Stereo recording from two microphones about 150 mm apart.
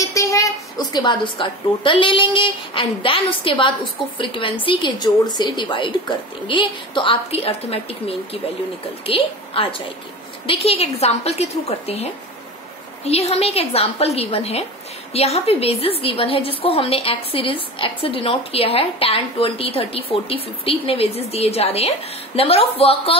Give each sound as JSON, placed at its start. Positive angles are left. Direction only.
{"t": 0.0, "sound": "a woman's voice", "side_deg": 20}